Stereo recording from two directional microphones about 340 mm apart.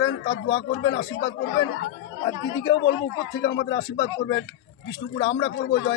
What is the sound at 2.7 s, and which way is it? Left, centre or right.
Speech, left.